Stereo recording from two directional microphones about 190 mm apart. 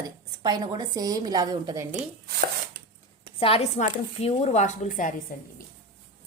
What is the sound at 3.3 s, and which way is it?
A woman's voice, 30° left (ahead or behind).